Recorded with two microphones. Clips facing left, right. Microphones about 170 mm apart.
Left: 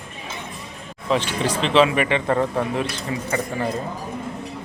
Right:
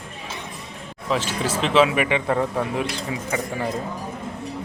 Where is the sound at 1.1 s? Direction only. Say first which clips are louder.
Left 2 dB; 5° right (ahead or behind).